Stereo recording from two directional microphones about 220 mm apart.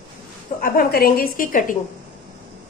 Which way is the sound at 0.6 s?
45° left (ahead or behind).